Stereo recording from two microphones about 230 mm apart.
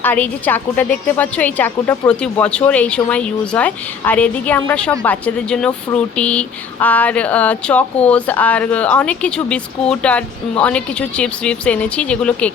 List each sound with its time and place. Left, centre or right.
0.0 s a woman's voice: centre